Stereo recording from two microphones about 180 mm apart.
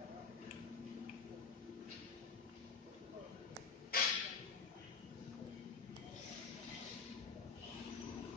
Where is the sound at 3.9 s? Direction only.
55° left (ahead or behind).